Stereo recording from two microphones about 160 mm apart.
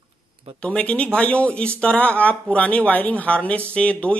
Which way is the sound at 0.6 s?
5° left (ahead or behind).